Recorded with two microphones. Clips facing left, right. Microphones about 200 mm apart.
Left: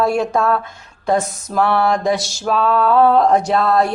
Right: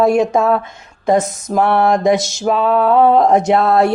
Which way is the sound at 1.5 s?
20° right (ahead or behind).